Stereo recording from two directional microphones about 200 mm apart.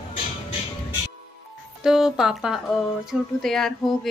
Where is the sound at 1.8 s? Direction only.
Centre (ahead or behind).